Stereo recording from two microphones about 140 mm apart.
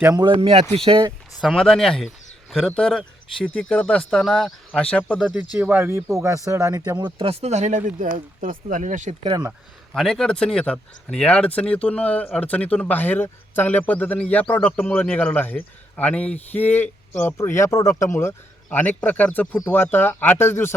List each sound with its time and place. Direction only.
0.2 s speech: 40° right (ahead or behind)
1.4 s speech: centre (ahead or behind)
5.5 s speech: 15° right (ahead or behind); by 9.1 s 60° right (ahead or behind)
9.9 s speech: 5° left (ahead or behind)